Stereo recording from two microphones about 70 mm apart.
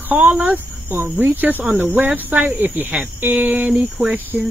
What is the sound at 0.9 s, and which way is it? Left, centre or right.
Speech, right.